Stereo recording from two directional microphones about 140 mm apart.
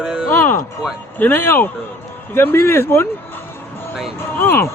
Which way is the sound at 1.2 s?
15° left (ahead or behind).